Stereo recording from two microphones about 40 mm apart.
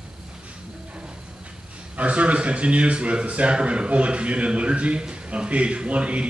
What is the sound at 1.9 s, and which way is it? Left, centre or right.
A man's voice, right.